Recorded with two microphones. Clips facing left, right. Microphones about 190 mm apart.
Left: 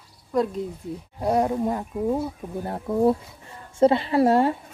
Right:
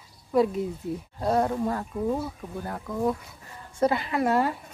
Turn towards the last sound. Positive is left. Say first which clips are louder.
# left 5 dB
turn(degrees=30)  # may be behind; listen again after turning